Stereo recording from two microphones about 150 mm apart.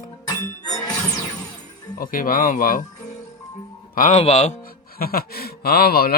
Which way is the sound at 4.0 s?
45° left (ahead or behind).